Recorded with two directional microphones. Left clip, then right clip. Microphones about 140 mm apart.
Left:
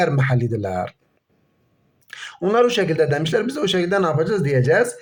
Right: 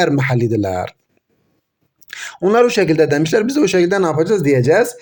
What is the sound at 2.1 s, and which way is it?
A man's voice, 30° right (ahead or behind).